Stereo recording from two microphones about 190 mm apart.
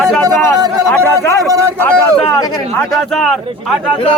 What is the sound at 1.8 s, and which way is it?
Speech, 5° left (ahead or behind).